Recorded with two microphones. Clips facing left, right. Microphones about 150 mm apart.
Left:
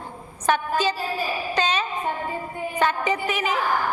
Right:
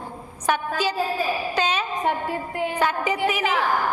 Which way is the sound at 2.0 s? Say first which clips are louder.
Right 3 dB; 85° right.